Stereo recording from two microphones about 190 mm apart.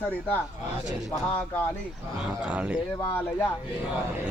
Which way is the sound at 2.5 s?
5° right (ahead or behind).